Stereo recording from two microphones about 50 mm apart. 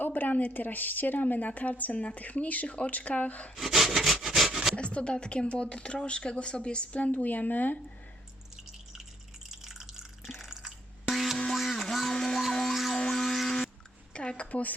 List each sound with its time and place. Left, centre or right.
0.0 s a woman's voice: left
3.5 s wood: centre
4.7 s speech: left
7.1 s a woman's voice: left
9.5 s drip: centre
11.1 s music: centre
11.5 s a sound: centre
12.1 s music: centre
13.0 s a sound: centre
14.1 s a sound: left